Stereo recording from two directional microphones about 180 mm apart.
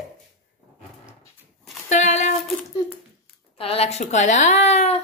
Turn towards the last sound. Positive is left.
turn(degrees=40)  # may be behind; listen again after turning